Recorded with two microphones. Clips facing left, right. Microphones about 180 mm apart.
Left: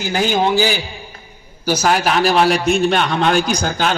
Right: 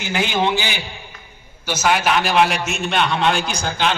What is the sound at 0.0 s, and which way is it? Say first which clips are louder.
A man's voice: left 3 dB; 40° left (ahead or behind).